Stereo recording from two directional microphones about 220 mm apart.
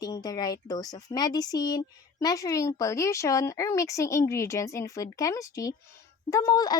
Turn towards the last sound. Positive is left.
turn(degrees=15)  # may be behind; listen again after turning